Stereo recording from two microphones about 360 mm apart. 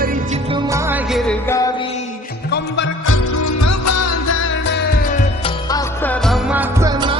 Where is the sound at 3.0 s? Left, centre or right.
Left.